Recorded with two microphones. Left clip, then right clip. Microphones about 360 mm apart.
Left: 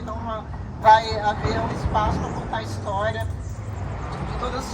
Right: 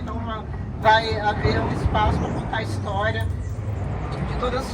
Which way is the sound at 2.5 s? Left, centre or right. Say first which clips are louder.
Left 1 dB; centre.